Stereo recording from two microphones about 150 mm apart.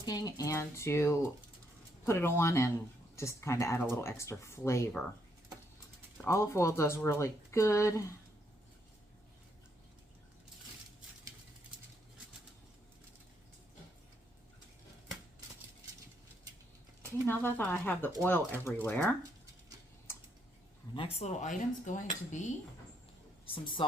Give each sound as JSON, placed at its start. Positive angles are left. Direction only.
{"t": 0.0, "sound": "speech", "side_deg": 25}
{"t": 6.2, "sound": "speech", "side_deg": 20}
{"t": 17.0, "sound": "speech", "side_deg": 15}
{"t": 20.1, "sound": "typing", "side_deg": 15}
{"t": 20.9, "sound": "speech", "side_deg": 40}